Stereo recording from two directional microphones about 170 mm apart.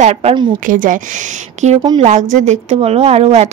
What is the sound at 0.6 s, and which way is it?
A woman's voice, 50° right (ahead or behind).